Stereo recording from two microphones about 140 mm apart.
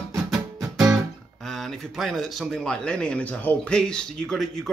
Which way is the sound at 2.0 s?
5° left (ahead or behind).